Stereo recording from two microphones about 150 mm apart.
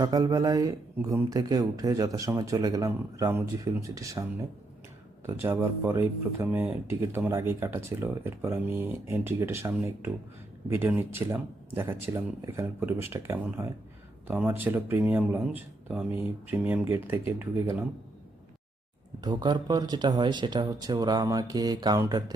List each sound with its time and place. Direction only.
0.0 s speech: 25° right (ahead or behind)
5.2 s speech: 15° right (ahead or behind)
19.2 s speech: 30° right (ahead or behind)